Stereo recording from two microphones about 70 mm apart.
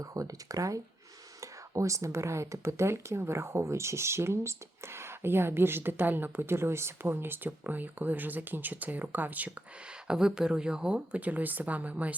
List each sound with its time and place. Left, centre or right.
0.0 s speech: right
10.1 s speech: centre